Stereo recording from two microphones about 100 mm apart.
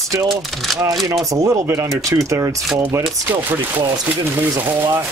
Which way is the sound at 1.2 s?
35° right (ahead or behind).